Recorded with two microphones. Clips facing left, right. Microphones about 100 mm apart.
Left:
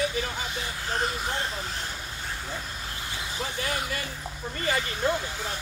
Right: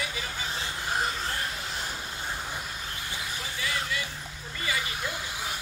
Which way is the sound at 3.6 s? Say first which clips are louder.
Even; 45° left (ahead or behind).